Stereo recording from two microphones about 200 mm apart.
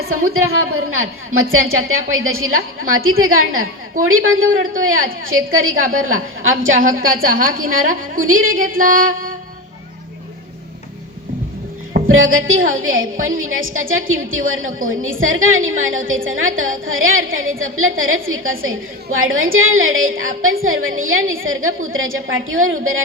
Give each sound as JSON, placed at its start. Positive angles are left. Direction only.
{"t": 0.1, "sound": "a woman's voice", "side_deg": -90}
{"t": 7.5, "sound": "music", "side_deg": -45}
{"t": 8.3, "sound": "a woman's voice", "side_deg": -90}
{"t": 8.8, "sound": "music", "side_deg": -45}
{"t": 12.0, "sound": "a woman's voice", "side_deg": -85}